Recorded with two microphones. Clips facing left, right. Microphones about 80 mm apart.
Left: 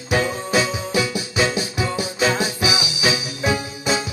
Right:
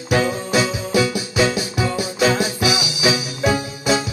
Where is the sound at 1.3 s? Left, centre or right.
Left.